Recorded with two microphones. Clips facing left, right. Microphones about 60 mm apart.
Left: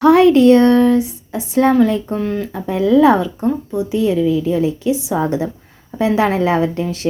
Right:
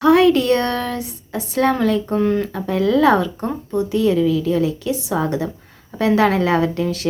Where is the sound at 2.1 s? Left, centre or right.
Centre.